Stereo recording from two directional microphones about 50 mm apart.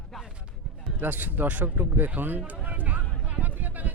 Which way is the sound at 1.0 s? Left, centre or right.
Right.